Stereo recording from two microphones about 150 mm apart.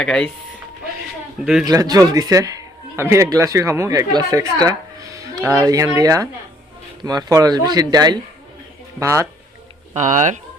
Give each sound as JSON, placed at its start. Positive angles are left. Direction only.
{"t": 0.0, "sound": "speech", "side_deg": 5}
{"t": 1.6, "sound": "a man's voice", "side_deg": -25}
{"t": 9.9, "sound": "speech", "side_deg": -55}